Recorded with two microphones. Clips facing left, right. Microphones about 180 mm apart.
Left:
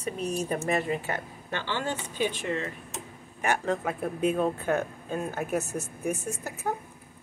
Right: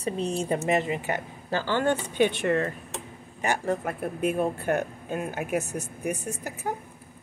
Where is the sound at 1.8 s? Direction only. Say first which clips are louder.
Right 8 dB; 60° right (ahead or behind).